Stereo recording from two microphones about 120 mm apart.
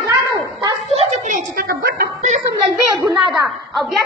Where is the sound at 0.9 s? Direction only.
65° right (ahead or behind); by 1.6 s 90° right.